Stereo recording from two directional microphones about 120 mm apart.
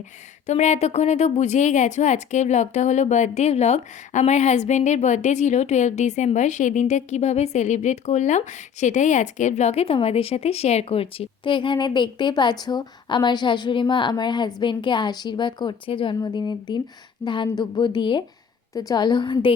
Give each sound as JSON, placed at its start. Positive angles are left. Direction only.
{"t": 0.4, "sound": "a woman's voice", "side_deg": 75}
{"t": 18.7, "sound": "a woman's voice", "side_deg": 30}